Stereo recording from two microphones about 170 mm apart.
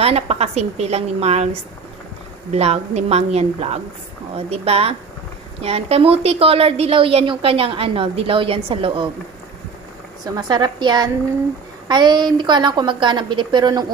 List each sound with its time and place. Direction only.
0.0 s a woman's voice: 35° right (ahead or behind)
10.2 s a woman's voice: 25° right (ahead or behind)